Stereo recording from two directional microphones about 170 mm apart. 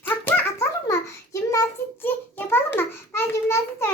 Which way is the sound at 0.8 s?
20° left (ahead or behind).